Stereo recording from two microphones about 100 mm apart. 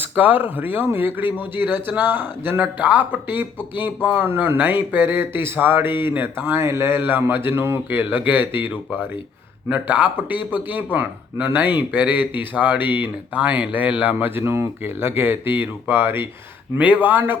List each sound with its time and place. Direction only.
0.0 s speech: 15° right (ahead or behind)